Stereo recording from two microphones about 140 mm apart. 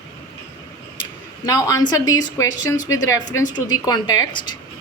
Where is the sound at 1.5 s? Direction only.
25° left (ahead or behind).